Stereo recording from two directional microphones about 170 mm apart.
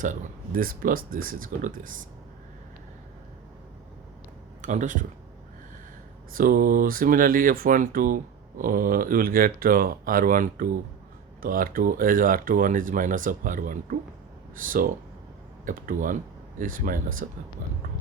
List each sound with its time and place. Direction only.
0.0 s speech: 50° right (ahead or behind)
4.6 s speech: 50° right (ahead or behind)
6.3 s speech: 55° right (ahead or behind)